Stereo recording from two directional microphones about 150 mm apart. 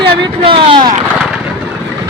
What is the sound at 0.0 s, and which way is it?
Speech, 35° right (ahead or behind).